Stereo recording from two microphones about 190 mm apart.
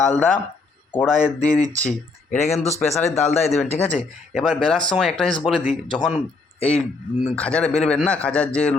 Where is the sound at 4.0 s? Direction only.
Centre (ahead or behind).